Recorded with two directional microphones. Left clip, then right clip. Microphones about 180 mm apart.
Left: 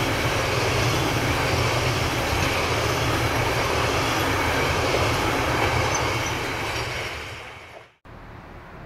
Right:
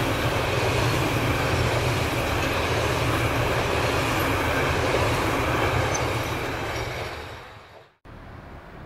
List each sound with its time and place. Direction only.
0.0 s vehicle: 45° right (ahead or behind)
0.7 s vehicle: 20° right (ahead or behind)
1.0 s vehicle: 45° right (ahead or behind)
2.9 s train: 40° right (ahead or behind)